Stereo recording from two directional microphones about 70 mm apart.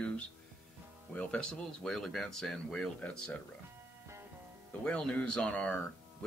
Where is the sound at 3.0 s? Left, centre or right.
Centre.